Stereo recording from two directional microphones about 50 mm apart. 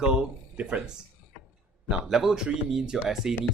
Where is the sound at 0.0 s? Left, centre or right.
Centre.